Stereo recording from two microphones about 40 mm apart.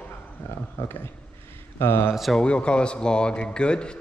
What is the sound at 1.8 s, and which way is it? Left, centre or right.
Speech, left.